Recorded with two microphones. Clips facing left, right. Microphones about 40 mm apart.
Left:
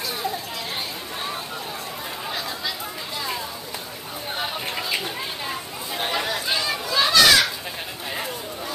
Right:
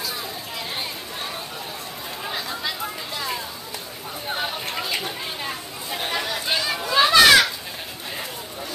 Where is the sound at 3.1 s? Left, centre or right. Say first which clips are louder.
Even; centre.